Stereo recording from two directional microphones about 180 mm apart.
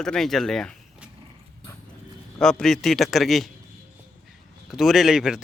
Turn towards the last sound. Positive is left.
turn(degrees=-5)  # may be behind; listen again after turning